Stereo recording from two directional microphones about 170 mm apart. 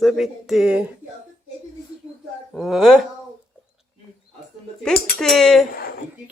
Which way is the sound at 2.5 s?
Centre (ahead or behind).